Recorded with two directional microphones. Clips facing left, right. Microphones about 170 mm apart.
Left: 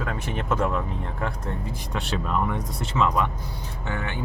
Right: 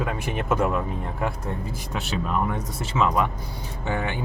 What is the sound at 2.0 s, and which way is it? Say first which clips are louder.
Speech: even; 5° right (ahead or behind).